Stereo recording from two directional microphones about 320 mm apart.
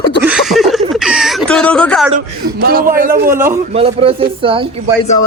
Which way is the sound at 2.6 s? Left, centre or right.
Right.